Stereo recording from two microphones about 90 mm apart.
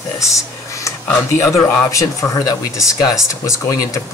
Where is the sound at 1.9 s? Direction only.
40° left (ahead or behind).